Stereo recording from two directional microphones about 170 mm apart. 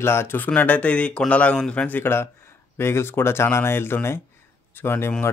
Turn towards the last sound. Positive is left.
turn(degrees=15)  # may be behind; listen again after turning